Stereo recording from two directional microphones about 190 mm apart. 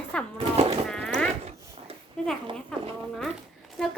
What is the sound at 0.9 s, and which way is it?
Speech, 5° left (ahead or behind).